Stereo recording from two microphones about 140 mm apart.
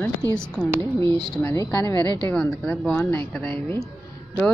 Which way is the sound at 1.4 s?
25° left (ahead or behind).